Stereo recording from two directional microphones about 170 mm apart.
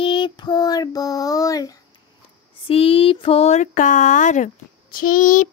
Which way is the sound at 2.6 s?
35° left (ahead or behind).